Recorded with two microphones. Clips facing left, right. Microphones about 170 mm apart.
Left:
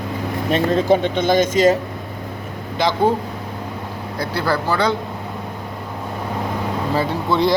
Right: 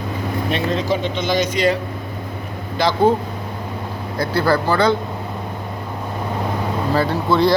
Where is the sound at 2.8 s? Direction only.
20° left (ahead or behind).